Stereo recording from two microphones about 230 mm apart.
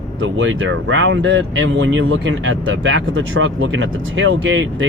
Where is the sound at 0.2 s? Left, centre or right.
Right.